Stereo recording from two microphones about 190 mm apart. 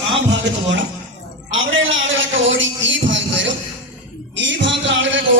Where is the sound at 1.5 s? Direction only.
90° right.